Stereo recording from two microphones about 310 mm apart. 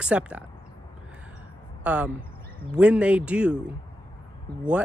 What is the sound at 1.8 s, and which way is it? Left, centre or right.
Speech, centre.